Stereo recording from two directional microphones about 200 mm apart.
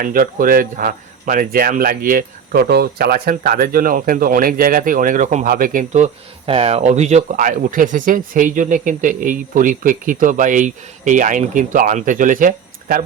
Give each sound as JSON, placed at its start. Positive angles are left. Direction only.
{"t": 0.0, "sound": "speech", "side_deg": -45}